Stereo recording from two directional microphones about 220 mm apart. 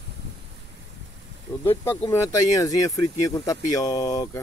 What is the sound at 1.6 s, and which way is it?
Speech, 10° left (ahead or behind).